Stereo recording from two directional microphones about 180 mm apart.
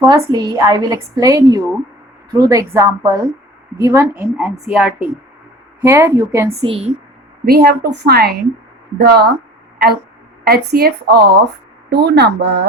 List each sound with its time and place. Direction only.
0.0 s a woman's voice: 20° right (ahead or behind)
4.2 s speech: 5° right (ahead or behind)
6.6 s a woman's voice: 30° right (ahead or behind)
7.4 s a woman's voice: 60° right (ahead or behind)